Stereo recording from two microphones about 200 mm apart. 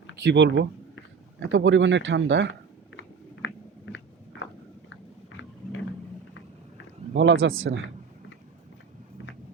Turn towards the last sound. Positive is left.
turn(degrees=-80)